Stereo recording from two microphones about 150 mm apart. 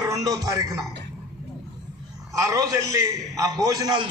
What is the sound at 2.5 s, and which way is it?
A man's voice, 20° right (ahead or behind).